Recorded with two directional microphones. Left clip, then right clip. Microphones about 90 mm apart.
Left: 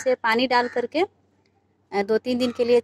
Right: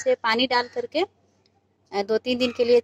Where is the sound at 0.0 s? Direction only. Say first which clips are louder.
Left 1 dB; 20° left (ahead or behind).